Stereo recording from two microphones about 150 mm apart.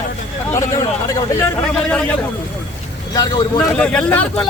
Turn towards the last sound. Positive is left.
turn(degrees=10)  # may be behind; listen again after turning